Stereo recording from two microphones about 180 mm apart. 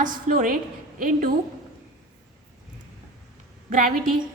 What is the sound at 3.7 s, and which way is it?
Speech, 50° right (ahead or behind).